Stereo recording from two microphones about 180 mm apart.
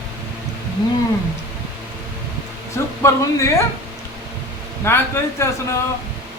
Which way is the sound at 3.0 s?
15° left (ahead or behind).